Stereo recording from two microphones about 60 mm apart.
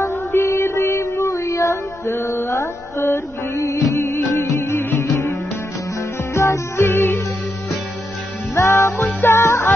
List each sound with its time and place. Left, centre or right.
0.0 s music: left
1.3 s music: left
6.3 s music: left
8.5 s music: left
9.0 s music: left